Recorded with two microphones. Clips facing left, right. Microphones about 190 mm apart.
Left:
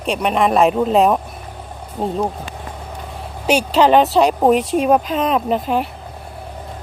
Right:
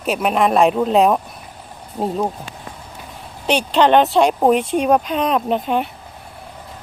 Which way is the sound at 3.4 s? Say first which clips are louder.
Left 1 dB; 5° left (ahead or behind).